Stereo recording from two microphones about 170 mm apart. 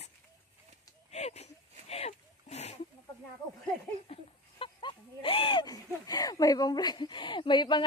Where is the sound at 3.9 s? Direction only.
35° left (ahead or behind).